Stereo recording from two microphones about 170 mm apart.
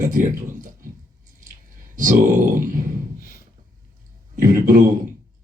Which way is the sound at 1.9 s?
50° right (ahead or behind).